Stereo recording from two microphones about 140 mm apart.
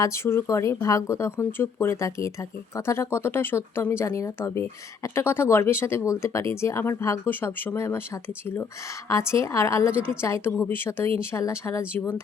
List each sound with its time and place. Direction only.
0.0 s speech: 20° left (ahead or behind)